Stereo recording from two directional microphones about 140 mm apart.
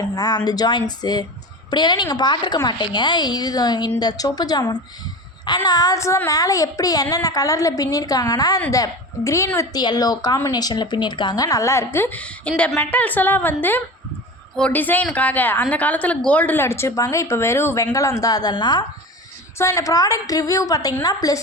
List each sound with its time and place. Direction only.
0.0 s a woman's voice: 30° left (ahead or behind)